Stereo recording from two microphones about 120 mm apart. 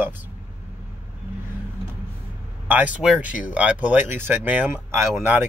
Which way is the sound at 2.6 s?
15° right (ahead or behind).